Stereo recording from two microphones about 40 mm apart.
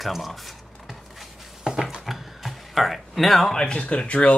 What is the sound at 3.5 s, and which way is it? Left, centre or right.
Speech, left.